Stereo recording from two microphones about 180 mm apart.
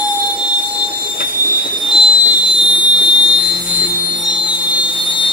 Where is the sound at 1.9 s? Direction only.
25° left (ahead or behind).